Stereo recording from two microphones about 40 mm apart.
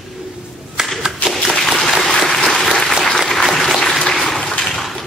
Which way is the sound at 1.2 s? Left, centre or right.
Left.